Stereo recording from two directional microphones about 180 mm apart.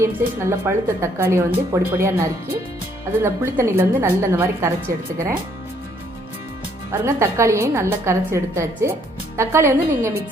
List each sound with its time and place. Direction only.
0.0 s a woman's voice: 15° right (ahead or behind)
3.2 s a woman's voice: 15° right (ahead or behind)
6.9 s a woman's voice: 15° right (ahead or behind)